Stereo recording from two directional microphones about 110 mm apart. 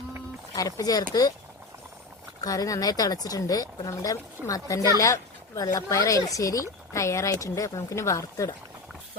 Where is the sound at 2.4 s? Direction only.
35° left (ahead or behind).